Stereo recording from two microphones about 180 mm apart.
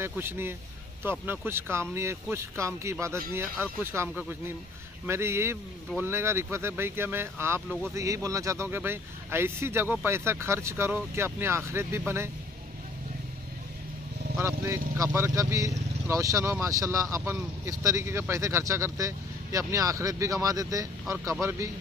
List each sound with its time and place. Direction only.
0.0 s speech: 15° right (ahead or behind)
14.4 s speech: 15° right (ahead or behind)